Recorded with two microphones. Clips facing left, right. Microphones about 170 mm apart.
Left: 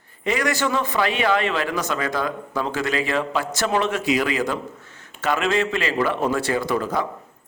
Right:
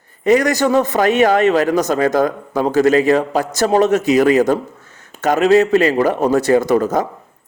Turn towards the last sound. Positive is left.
turn(degrees=-45)  # may be behind; listen again after turning